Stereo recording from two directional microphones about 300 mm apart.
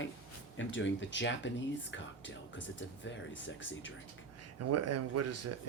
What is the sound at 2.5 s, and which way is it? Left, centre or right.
Speech, left.